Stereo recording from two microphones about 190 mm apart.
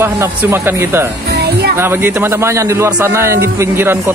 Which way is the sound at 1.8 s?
10° right (ahead or behind).